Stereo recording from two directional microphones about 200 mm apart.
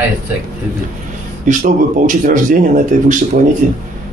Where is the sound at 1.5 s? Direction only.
40° right (ahead or behind).